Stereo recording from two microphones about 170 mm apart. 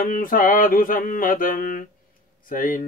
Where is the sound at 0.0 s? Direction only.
55° left (ahead or behind).